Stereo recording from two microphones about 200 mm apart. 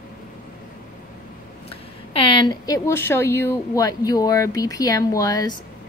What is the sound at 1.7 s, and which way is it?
A woman's voice, 25° left (ahead or behind).